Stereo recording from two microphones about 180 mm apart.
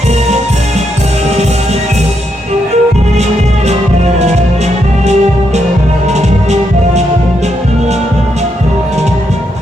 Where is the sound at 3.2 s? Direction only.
35° right (ahead or behind).